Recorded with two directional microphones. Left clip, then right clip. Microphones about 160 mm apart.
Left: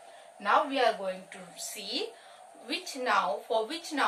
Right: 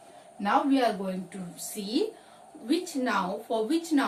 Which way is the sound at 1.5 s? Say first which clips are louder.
Right 5 dB; 25° left (ahead or behind).